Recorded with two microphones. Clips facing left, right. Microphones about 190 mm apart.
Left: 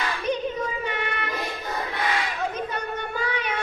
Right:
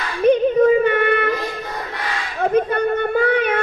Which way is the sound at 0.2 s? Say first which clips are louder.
Right 16 dB; 55° right (ahead or behind).